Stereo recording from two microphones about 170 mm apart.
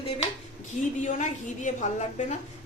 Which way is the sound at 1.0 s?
45° left (ahead or behind).